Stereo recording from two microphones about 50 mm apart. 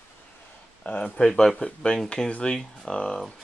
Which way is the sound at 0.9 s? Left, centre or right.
Left.